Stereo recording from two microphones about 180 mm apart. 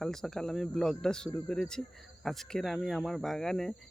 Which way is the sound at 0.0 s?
5° left (ahead or behind).